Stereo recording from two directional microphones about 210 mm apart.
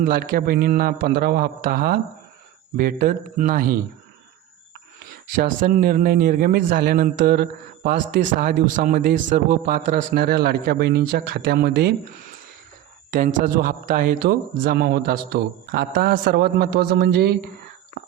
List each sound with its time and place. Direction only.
0.0 s a man's voice: 40° right (ahead or behind)
5.4 s a man's voice: 40° right (ahead or behind)
13.1 s a man's voice: 40° right (ahead or behind)